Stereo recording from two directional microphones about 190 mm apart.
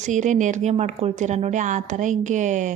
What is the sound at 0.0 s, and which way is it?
A woman's voice, 40° right (ahead or behind).